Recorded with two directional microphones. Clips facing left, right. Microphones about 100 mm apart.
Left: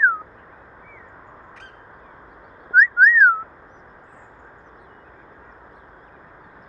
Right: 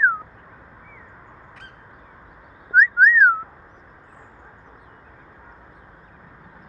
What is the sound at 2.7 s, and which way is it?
Whistling, 5° left (ahead or behind).